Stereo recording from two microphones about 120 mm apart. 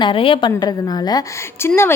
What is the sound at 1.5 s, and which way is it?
Speech, 20° left (ahead or behind).